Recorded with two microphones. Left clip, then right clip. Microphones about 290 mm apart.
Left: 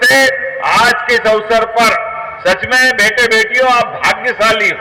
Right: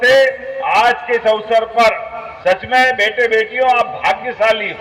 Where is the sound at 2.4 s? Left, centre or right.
Left.